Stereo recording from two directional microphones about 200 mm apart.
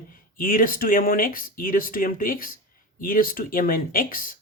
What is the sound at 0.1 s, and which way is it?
Speech, 45° left (ahead or behind).